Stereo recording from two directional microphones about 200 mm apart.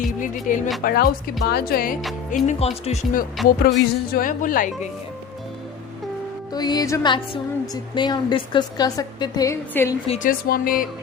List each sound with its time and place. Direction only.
0.4 s speech: 40° left (ahead or behind)
6.5 s music: 20° left (ahead or behind)
7.7 s a woman's voice: 20° left (ahead or behind)
10.2 s speech: 45° left (ahead or behind)